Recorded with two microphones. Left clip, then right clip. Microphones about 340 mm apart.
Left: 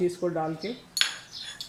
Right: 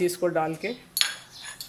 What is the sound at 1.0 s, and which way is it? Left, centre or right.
Cutlery, centre.